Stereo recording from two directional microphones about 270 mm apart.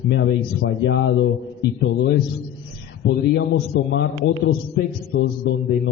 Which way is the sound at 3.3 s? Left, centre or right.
Left.